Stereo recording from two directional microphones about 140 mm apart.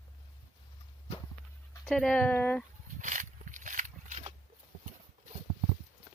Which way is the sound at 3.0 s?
65° right (ahead or behind).